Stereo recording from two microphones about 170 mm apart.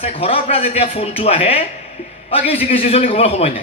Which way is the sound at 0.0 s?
35° left (ahead or behind).